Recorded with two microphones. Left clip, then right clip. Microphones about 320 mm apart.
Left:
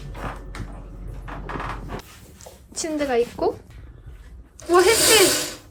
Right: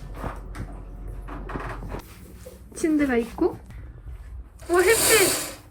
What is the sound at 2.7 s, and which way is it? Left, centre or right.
Speech, centre.